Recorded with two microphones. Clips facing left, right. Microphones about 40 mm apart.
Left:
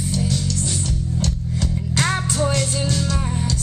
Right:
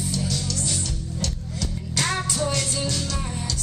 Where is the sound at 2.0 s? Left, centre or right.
Centre.